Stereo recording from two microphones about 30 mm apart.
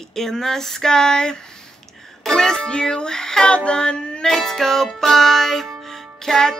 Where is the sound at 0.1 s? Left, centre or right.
Centre.